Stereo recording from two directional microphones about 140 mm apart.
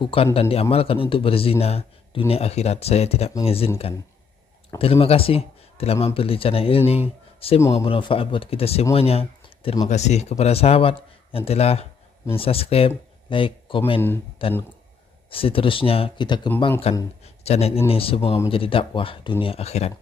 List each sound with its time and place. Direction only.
0.0 s speech: 45° left (ahead or behind)
9.8 s speech: 55° left (ahead or behind)
17.2 s a sound: 45° left (ahead or behind)
17.8 s speech: 40° left (ahead or behind)